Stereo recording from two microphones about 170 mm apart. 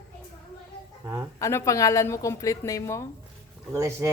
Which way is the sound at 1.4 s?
20° left (ahead or behind).